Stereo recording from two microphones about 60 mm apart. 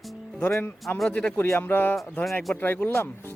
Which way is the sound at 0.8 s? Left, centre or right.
Centre.